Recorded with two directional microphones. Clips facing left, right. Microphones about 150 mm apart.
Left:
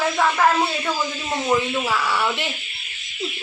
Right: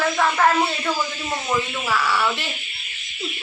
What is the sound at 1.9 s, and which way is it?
Speech, 20° left (ahead or behind).